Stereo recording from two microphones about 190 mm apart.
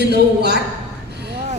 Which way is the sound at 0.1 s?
60° right (ahead or behind).